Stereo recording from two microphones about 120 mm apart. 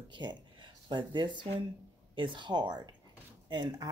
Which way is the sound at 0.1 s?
40° right (ahead or behind).